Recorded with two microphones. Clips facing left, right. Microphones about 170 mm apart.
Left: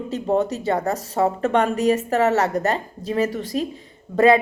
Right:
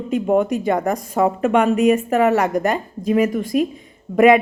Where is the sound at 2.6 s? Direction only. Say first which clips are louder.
Right 2 dB; 25° left (ahead or behind).